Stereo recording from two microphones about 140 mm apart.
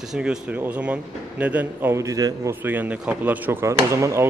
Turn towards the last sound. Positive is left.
turn(degrees=-20)  # may be behind; listen again after turning